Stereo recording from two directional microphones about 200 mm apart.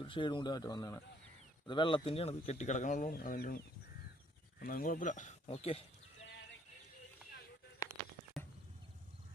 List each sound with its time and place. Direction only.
0.0 s speech: 25° left (ahead or behind); by 3.6 s 45° left (ahead or behind)
4.6 s speech: 45° left (ahead or behind)